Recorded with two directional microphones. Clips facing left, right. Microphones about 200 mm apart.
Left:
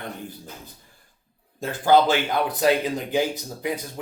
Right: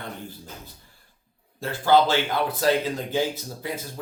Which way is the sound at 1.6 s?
15° left (ahead or behind).